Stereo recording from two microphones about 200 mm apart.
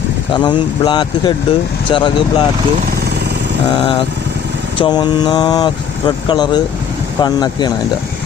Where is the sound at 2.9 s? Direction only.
50° right (ahead or behind).